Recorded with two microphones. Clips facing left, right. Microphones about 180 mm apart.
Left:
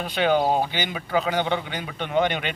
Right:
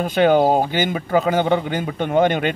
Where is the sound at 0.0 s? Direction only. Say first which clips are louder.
Right 6 dB; 45° right (ahead or behind).